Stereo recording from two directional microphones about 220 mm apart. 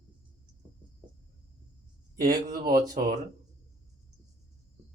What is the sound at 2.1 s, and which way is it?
Speech, 45° right (ahead or behind).